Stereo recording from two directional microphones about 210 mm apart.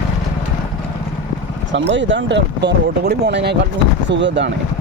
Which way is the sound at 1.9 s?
60° right (ahead or behind).